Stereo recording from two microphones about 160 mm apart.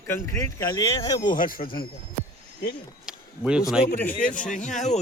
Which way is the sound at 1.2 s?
60° left (ahead or behind).